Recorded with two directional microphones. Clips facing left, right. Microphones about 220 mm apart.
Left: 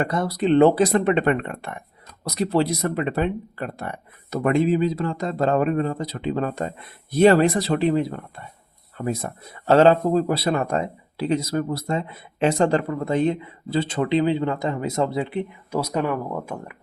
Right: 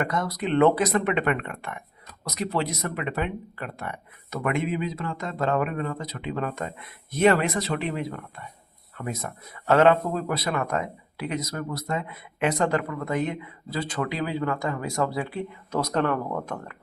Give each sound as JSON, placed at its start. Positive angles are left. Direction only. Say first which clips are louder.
{"t": 0.0, "sound": "speech", "louder": "left 5 dB", "side_deg": 30}
{"t": 15.8, "sound": "speech", "louder": "even", "side_deg": 10}